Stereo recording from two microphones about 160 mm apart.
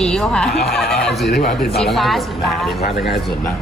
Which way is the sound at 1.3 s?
85° left.